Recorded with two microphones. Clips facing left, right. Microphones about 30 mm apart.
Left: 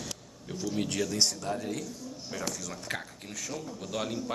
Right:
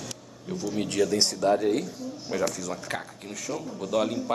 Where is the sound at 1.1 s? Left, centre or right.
Right.